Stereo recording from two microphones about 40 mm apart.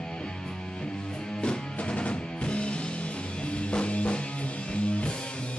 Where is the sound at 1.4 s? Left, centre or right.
Left.